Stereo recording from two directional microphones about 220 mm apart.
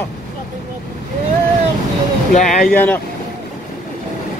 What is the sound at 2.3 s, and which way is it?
Speech, 35° left (ahead or behind).